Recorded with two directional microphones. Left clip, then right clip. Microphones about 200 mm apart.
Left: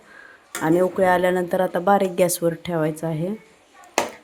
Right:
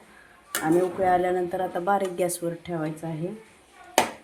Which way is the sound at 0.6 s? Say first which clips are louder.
Left 5 dB; 65° left (ahead or behind).